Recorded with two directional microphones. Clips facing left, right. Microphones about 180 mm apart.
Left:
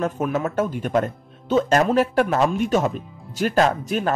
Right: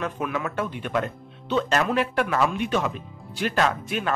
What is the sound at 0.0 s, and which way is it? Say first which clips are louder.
Speech: left 5 dB; 40° left (ahead or behind).